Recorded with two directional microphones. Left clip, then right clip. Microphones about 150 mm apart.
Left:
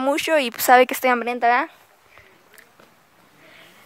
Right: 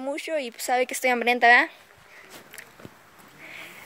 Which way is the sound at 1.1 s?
20° left (ahead or behind).